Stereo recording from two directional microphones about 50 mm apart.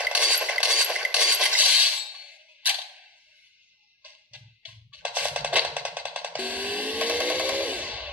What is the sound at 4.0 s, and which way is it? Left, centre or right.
Music, right.